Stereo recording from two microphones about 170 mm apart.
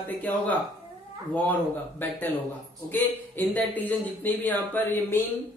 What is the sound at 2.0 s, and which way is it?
Speech, 15° left (ahead or behind).